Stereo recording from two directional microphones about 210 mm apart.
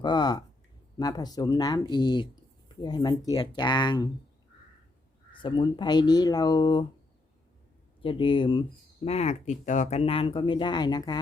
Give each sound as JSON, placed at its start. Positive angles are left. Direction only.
{"t": 0.0, "sound": "speech", "side_deg": 20}
{"t": 5.3, "sound": "speech", "side_deg": 20}
{"t": 8.0, "sound": "speech", "side_deg": 25}